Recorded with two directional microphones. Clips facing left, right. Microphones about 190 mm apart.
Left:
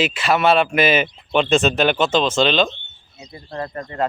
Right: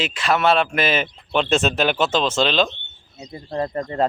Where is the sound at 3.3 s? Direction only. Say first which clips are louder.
Right 4 dB; 35° right (ahead or behind).